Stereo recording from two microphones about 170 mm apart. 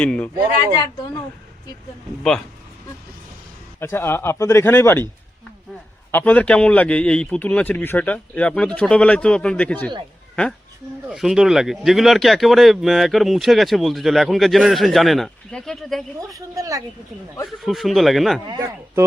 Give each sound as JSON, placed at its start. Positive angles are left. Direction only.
{"t": 0.0, "sound": "a man's voice", "side_deg": 10}
{"t": 3.8, "sound": "a man's voice", "side_deg": 15}
{"t": 6.1, "sound": "a man's voice", "side_deg": 10}
{"t": 11.1, "sound": "speech", "side_deg": -5}
{"t": 16.3, "sound": "speech", "side_deg": -20}
{"t": 17.4, "sound": "speech", "side_deg": 0}
{"t": 18.4, "sound": "speech", "side_deg": -25}